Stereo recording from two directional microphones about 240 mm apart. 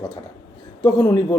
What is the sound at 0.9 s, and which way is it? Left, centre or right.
Speech, centre.